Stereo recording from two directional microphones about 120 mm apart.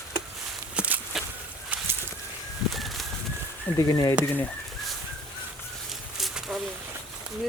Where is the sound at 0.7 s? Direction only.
10° right (ahead or behind).